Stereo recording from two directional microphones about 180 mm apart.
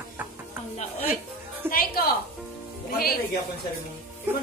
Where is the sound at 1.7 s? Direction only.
55° left (ahead or behind).